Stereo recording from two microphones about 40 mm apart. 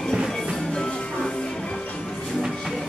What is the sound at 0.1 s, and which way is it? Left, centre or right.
Music, centre.